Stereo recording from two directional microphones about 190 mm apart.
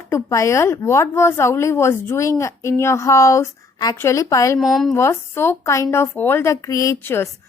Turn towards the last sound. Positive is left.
turn(degrees=15)  # may be behind; listen again after turning